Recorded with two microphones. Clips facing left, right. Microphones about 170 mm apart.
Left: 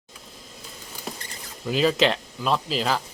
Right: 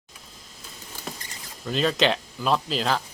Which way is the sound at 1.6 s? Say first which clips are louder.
Left 2 dB; 5° left (ahead or behind).